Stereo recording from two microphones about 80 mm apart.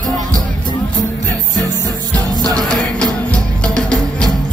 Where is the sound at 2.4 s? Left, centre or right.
Right.